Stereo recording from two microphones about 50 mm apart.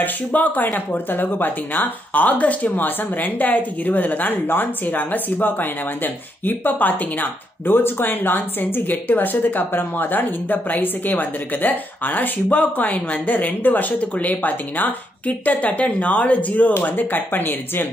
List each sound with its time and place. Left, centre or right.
0.0 s speech: left